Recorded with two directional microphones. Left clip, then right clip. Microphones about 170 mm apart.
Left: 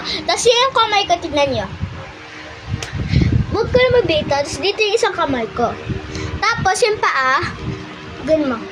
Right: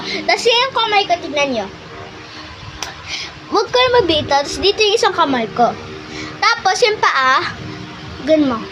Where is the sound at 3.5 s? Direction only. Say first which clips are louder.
Right 1 dB; 90° right.